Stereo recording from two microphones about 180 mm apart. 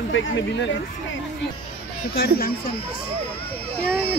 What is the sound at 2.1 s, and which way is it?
Speech, 55° left (ahead or behind).